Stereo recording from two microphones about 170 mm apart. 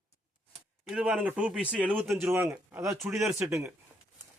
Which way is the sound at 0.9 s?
5° right (ahead or behind).